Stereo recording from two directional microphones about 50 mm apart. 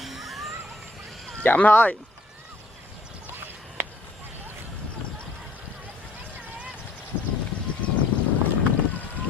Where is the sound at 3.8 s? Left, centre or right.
Right.